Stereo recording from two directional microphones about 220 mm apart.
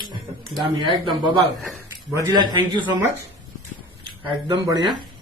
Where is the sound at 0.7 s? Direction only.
20° right (ahead or behind).